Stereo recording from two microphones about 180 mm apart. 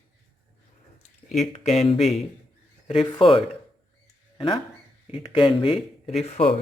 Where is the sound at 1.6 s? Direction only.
35° left (ahead or behind).